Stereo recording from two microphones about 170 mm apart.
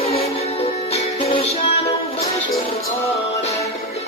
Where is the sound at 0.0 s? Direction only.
35° left (ahead or behind).